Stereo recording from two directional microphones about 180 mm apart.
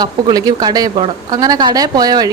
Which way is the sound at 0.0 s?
20° right (ahead or behind).